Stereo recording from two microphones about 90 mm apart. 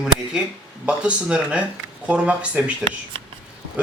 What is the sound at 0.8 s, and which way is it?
Speech, 10° right (ahead or behind).